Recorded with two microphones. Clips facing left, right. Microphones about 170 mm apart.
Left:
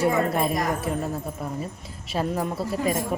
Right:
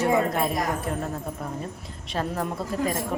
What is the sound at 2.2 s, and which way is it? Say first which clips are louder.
Speech: left 2 dB; 10° left (ahead or behind).